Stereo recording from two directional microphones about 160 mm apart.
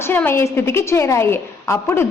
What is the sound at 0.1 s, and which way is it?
A woman's voice, 15° left (ahead or behind).